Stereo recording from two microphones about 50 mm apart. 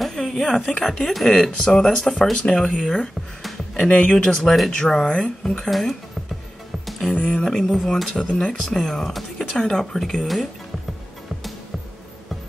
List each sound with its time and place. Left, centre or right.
0.0 s speech: centre
3.4 s music: centre
3.9 s speech: left
5.7 s speech: centre
7.2 s speech: left
7.4 s speech: centre
8.2 s speech: centre